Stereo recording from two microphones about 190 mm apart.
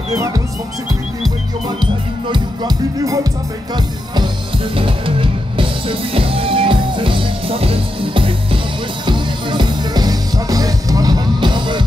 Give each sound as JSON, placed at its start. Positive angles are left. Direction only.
{"t": 1.8, "sound": "speech", "side_deg": -25}
{"t": 4.7, "sound": "music", "side_deg": -25}